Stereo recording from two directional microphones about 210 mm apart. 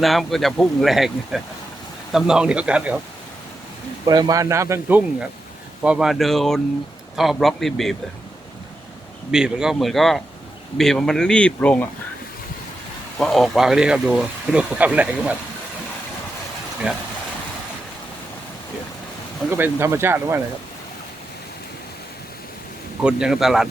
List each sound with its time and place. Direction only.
0.0 s speech: centre (ahead or behind)
4.0 s speech: 20° right (ahead or behind); by 7.9 s centre (ahead or behind)
9.3 s speech: 5° right (ahead or behind)
13.1 s speech: centre (ahead or behind)
19.5 s speech: 10° right (ahead or behind)
23.0 s speech: 5° right (ahead or behind)